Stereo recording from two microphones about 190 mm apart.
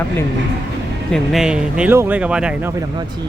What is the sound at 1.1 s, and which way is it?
Speech, centre (ahead or behind).